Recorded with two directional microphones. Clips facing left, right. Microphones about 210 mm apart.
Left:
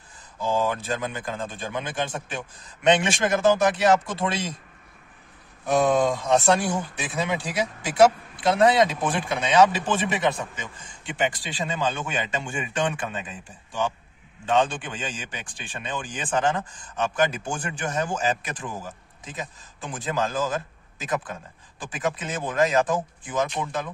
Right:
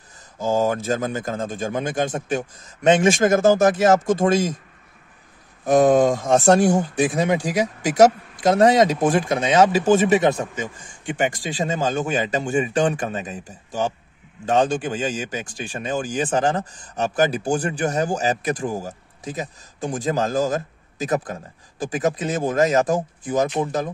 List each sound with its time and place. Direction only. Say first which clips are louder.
0.4 s a man's voice: right 5 dB; 45° right (ahead or behind)
5.7 s a man's voice: right 6 dB; 45° right (ahead or behind)